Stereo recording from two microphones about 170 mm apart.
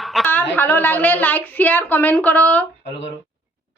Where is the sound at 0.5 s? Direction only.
10° left (ahead or behind).